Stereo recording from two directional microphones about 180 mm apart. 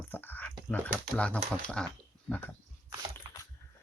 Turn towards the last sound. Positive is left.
turn(degrees=-20)  # may be behind; listen again after turning